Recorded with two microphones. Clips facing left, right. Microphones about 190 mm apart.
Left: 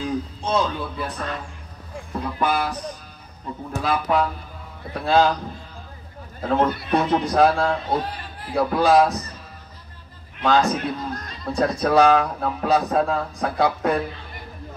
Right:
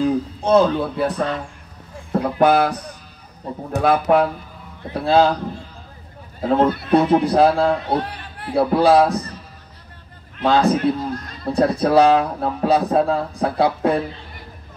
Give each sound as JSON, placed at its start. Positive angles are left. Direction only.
{"t": 0.4, "sound": "speech", "side_deg": -60}
{"t": 3.8, "sound": "speech", "side_deg": -55}
{"t": 4.9, "sound": "speech", "side_deg": -35}
{"t": 6.4, "sound": "speech", "side_deg": -20}
{"t": 6.9, "sound": "speech", "side_deg": -30}
{"t": 7.9, "sound": "a sound", "side_deg": -65}
{"t": 8.5, "sound": "speech", "side_deg": -30}
{"t": 10.4, "sound": "speech", "side_deg": -35}